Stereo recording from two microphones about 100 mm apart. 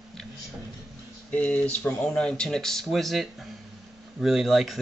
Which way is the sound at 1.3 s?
15° left (ahead or behind).